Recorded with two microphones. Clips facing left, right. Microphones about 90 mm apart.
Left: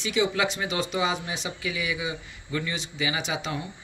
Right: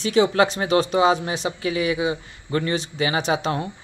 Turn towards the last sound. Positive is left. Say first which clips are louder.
# right 8 dB
turn(degrees=-50)  # may be behind; listen again after turning